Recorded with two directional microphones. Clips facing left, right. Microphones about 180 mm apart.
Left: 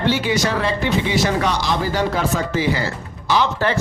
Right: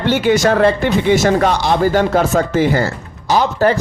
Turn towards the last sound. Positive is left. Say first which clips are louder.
# right 5 dB
turn(degrees=-40)  # may be behind; listen again after turning